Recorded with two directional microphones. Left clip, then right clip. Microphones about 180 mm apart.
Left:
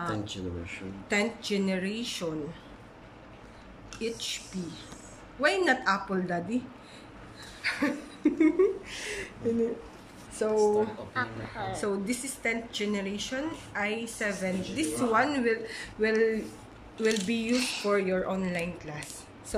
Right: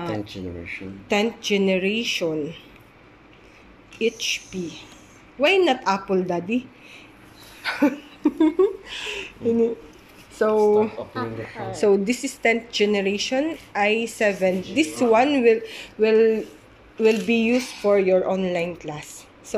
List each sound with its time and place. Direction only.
0.1 s speech: centre (ahead or behind)
1.0 s speech: 15° right (ahead or behind)
4.0 s speech: 15° right (ahead or behind)
8.2 s a woman's voice: centre (ahead or behind)
10.7 s speech: 15° right (ahead or behind)
11.7 s speech: 25° right (ahead or behind)